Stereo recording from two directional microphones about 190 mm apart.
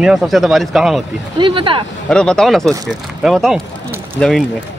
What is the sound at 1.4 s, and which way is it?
Speech, 25° right (ahead or behind).